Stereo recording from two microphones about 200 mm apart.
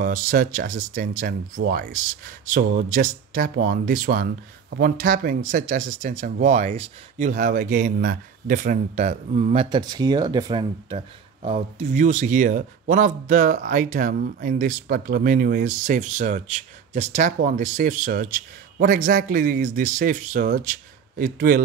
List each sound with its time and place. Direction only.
0.0 s speech: 45° right (ahead or behind)